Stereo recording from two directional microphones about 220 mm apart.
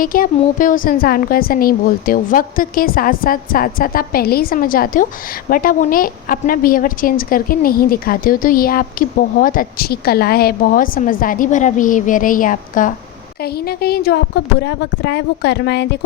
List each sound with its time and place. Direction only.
0.0 s a woman's voice: 40° left (ahead or behind)